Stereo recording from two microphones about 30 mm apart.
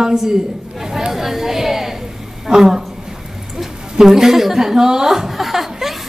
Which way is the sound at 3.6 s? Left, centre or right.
Centre.